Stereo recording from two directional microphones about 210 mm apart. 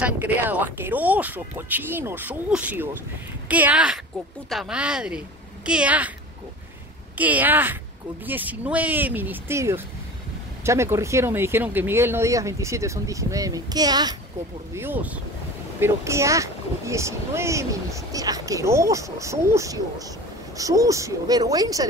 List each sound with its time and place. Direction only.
0.0 s speech: 10° right (ahead or behind)
7.2 s speech: 5° right (ahead or behind)